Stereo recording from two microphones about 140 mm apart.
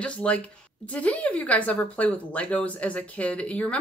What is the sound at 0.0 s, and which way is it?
Speech, 10° left (ahead or behind).